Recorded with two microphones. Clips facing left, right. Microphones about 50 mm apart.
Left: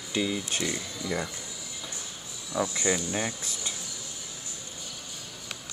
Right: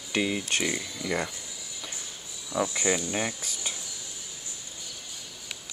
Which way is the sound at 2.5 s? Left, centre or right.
Centre.